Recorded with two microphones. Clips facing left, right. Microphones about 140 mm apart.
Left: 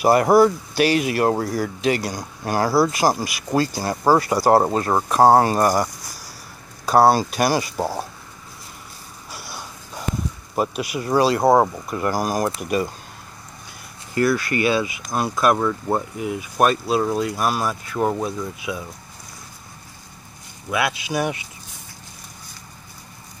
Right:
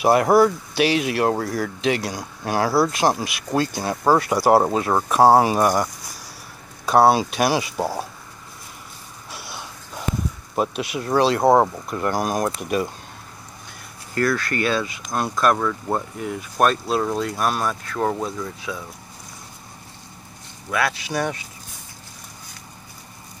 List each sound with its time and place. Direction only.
0.0 s speech: centre (ahead or behind)
9.3 s a sound: centre (ahead or behind)
10.5 s speech: centre (ahead or behind)
14.1 s speech: 10° left (ahead or behind)
20.7 s speech: 15° left (ahead or behind)